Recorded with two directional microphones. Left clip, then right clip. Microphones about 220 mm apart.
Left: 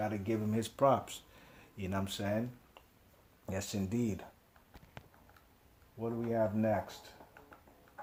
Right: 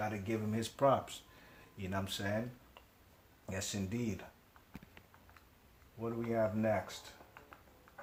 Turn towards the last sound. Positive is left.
turn(degrees=35)  # may be behind; listen again after turning